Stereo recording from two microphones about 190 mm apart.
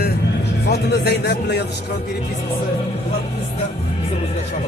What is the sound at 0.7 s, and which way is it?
Speech, 60° left (ahead or behind).